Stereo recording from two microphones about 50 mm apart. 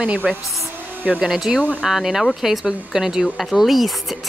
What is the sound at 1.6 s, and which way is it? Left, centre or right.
Speech, left.